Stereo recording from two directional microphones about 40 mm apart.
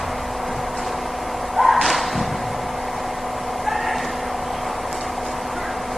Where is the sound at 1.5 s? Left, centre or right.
Centre.